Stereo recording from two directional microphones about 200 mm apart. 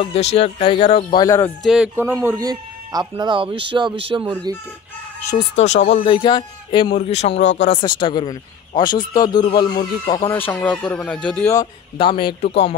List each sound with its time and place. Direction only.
0.0 s speech: 30° left (ahead or behind)
1.2 s speech: 15° left (ahead or behind)
1.6 s speech: 5° right (ahead or behind)
2.1 s speech: 15° right (ahead or behind)
5.6 s speech: 35° left (ahead or behind)
7.8 s speech: 20° left (ahead or behind)
10.3 s speech: 10° left (ahead or behind)
11.5 s speech: 25° left (ahead or behind)